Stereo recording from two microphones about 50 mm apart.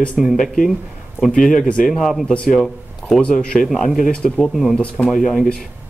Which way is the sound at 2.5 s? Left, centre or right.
Centre.